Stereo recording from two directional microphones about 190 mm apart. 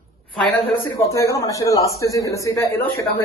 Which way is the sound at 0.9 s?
15° left (ahead or behind).